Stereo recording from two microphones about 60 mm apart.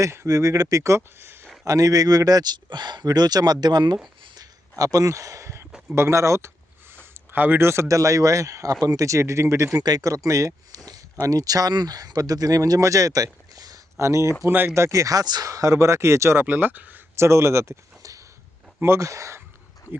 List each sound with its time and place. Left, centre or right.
0.0 s speech: right
0.3 s a man's voice: right
1.6 s speech: right
4.8 s speech: right
6.9 s a sound: right
7.6 s speech: right
7.9 s a man's voice: right
9.7 s speech: right
10.8 s speech: right
14.0 s a man's voice: right
14.4 s speech: right
14.7 s a man's voice: right
16.4 s speech: right
17.2 s a man's voice: right